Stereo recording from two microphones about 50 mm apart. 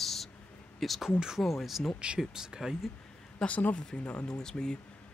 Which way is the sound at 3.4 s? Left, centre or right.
Left.